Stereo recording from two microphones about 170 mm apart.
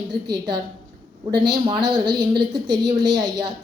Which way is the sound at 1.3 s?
25° right (ahead or behind).